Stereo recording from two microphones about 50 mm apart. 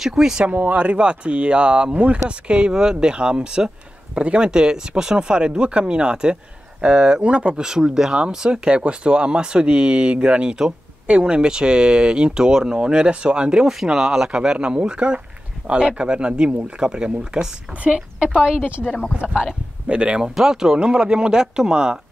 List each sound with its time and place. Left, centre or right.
0.0 s speech: centre
0.5 s speech: right
7.6 s speech: centre
18.8 s speech: centre
19.9 s speech: right
20.2 s speech: centre